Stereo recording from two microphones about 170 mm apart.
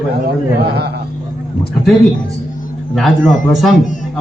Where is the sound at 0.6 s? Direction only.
70° right (ahead or behind).